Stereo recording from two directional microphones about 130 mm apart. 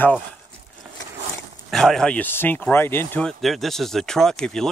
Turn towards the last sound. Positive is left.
turn(degrees=5)  # may be behind; listen again after turning